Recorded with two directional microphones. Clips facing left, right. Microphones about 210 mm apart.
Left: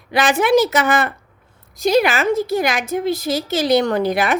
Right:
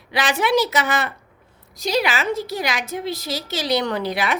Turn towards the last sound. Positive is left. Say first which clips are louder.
# left 5 dB
turn(degrees=50)  # may be behind; listen again after turning